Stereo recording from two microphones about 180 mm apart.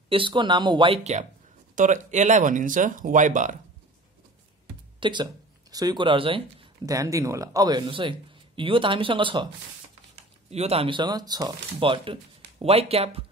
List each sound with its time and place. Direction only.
0.1 s speech: 25° right (ahead or behind); by 3.5 s 45° right (ahead or behind)
5.0 s speech: 25° right (ahead or behind)
6.9 s speech: 20° right (ahead or behind)
10.5 s speech: 35° right (ahead or behind)